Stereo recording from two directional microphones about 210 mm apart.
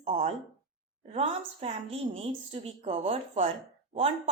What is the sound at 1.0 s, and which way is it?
A woman's voice, 30° right (ahead or behind).